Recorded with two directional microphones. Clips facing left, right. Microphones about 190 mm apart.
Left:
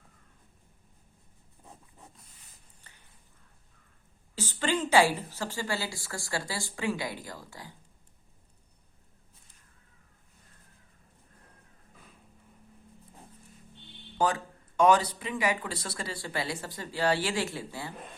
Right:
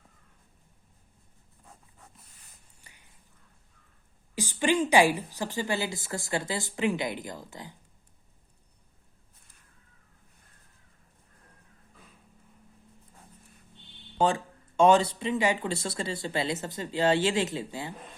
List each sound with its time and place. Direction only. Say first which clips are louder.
2.8 s a sound: right 1 dB; 10° right (ahead or behind)
4.4 s speech: right 4 dB; 15° right (ahead or behind)
14.2 s speech: right 2 dB; 25° right (ahead or behind)